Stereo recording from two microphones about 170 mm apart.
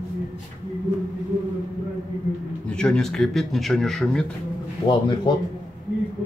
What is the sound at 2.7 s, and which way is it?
Speech, 5° left (ahead or behind).